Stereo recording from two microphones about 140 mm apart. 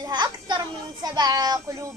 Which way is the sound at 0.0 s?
30° right (ahead or behind).